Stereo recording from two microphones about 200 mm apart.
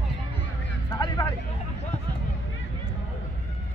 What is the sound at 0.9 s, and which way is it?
Vehicle, 25° left (ahead or behind).